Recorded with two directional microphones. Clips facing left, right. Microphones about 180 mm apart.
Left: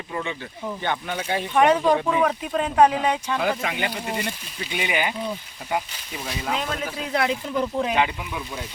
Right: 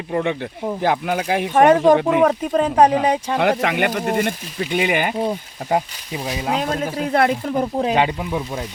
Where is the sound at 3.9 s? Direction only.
50° right (ahead or behind).